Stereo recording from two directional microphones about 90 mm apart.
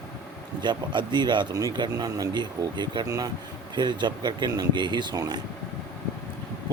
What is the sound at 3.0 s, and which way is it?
Speech, 60° right (ahead or behind).